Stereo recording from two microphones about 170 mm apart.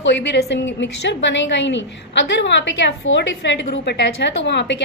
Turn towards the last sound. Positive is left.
turn(degrees=90)